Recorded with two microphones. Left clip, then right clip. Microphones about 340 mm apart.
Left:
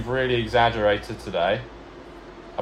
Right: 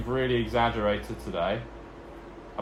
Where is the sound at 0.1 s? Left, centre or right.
Left.